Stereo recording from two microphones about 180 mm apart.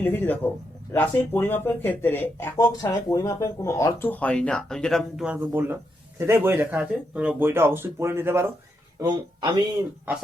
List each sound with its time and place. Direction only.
0.0 s speech: 10° left (ahead or behind); by 9.6 s 20° right (ahead or behind)